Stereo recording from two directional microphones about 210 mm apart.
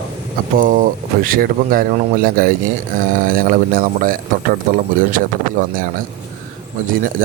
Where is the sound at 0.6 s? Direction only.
40° right (ahead or behind).